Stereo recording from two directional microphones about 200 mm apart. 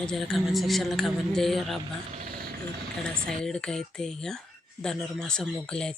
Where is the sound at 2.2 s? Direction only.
50° right (ahead or behind).